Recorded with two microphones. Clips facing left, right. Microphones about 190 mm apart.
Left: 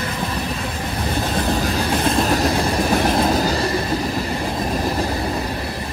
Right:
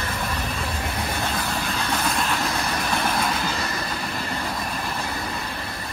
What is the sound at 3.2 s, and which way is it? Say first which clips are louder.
Train: left 8 dB; 35° left (ahead or behind).